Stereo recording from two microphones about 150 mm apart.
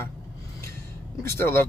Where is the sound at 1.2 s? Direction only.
15° left (ahead or behind).